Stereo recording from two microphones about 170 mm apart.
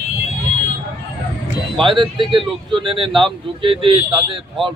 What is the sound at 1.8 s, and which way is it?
Speech, 30° right (ahead or behind).